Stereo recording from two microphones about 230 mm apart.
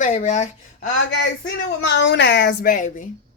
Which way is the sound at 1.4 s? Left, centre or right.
Left.